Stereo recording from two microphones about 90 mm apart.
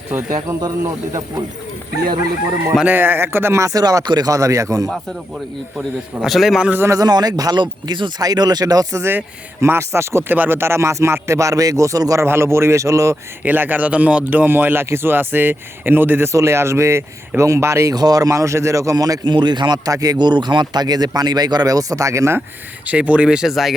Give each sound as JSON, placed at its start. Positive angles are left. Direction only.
{"t": 2.8, "sound": "speech", "side_deg": -20}
{"t": 4.3, "sound": "speech", "side_deg": -35}
{"t": 5.7, "sound": "a man's voice", "side_deg": -5}
{"t": 6.7, "sound": "speech", "side_deg": -25}
{"t": 6.9, "sound": "speech", "side_deg": -45}
{"t": 9.0, "sound": "speech", "side_deg": -25}
{"t": 12.2, "sound": "speech", "side_deg": -30}
{"t": 13.4, "sound": "speech", "side_deg": -20}
{"t": 17.9, "sound": "speech", "side_deg": -45}
{"t": 19.2, "sound": "a man's voice", "side_deg": -55}
{"t": 20.1, "sound": "speech", "side_deg": -55}
{"t": 22.9, "sound": "speech", "side_deg": -15}